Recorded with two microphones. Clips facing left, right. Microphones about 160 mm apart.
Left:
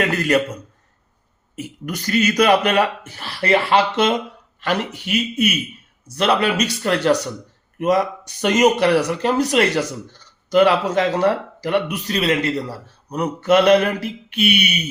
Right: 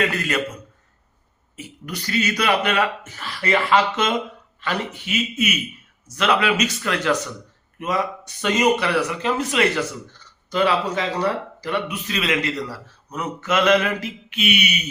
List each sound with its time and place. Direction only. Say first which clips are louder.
0.0 s a sound: left 5 dB; 40° left (ahead or behind)
1.5 s speech: left 5 dB; 45° left (ahead or behind)
12.0 s speech: left 4 dB; 35° left (ahead or behind)